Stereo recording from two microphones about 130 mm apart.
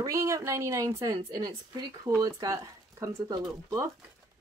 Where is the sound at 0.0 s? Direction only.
25° right (ahead or behind).